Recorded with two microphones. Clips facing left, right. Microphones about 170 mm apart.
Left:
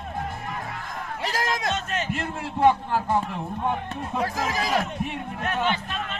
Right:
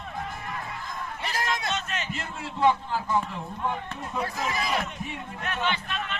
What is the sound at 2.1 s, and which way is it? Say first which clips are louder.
A man's voice: left 6 dB; 60° left (ahead or behind).